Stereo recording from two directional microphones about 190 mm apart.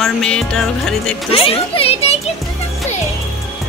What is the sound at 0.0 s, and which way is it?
Speech, 5° left (ahead or behind).